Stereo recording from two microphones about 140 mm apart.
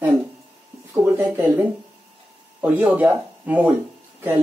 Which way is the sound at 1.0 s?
15° right (ahead or behind).